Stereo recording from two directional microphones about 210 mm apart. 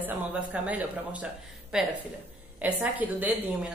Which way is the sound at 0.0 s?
5° right (ahead or behind).